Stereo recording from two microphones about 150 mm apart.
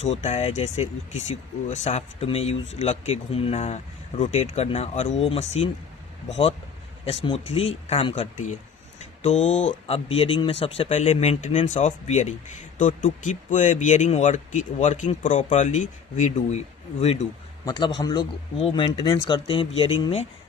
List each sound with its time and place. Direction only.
0.0 s speech: 50° left (ahead or behind)
7.1 s speech: 45° left (ahead or behind)
17.7 s a man's voice: 30° left (ahead or behind)